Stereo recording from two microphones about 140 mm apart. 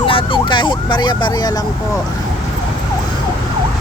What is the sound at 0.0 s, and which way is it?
Speech, 40° left (ahead or behind).